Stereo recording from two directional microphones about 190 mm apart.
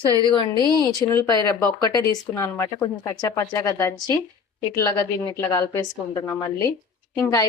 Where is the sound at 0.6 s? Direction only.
20° right (ahead or behind).